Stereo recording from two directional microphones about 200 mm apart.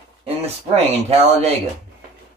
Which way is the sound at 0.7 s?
30° right (ahead or behind).